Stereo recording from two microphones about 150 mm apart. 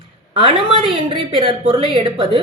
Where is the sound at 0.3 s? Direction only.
35° right (ahead or behind).